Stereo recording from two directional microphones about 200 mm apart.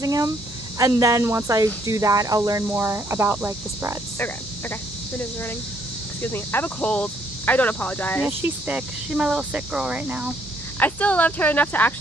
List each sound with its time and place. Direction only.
0.0 s speech: 15° right (ahead or behind)
6.2 s speech: 10° left (ahead or behind)
8.3 s speech: 10° right (ahead or behind)
10.8 s speech: 5° left (ahead or behind)